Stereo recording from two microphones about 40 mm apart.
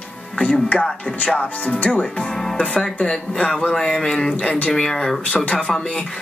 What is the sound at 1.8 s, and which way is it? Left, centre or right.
Speech, left.